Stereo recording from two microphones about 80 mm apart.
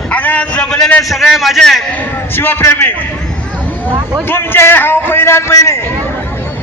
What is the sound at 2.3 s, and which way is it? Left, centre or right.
Speech, left.